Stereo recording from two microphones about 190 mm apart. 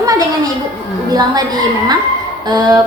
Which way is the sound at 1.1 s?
20° right (ahead or behind).